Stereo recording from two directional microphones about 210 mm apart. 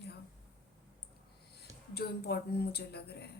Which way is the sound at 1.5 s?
50° left (ahead or behind).